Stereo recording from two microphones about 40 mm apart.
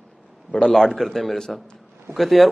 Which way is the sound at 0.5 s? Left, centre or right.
Left.